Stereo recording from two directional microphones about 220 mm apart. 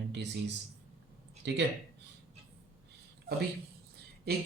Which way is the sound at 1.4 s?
50° right (ahead or behind).